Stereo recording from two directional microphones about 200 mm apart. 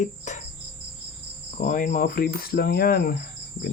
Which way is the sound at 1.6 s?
40° left (ahead or behind).